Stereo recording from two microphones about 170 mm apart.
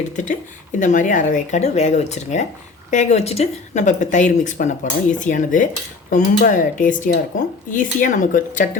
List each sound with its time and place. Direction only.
0.2 s speech: 45° left (ahead or behind)